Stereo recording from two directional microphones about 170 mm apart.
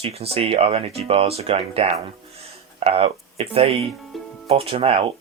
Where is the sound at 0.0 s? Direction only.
35° right (ahead or behind).